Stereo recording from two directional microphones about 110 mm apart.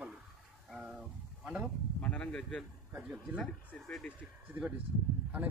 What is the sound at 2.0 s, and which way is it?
Bee, 10° left (ahead or behind).